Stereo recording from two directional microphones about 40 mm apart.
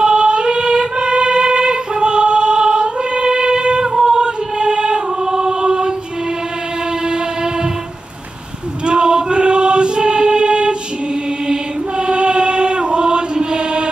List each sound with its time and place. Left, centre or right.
0.0 s music: right
3.9 s female singing: centre
4.2 s choir: right
8.8 s choir: right
12.1 s chant: right